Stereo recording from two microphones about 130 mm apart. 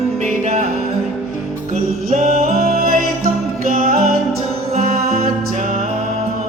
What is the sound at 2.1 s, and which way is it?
Music, 75° right (ahead or behind).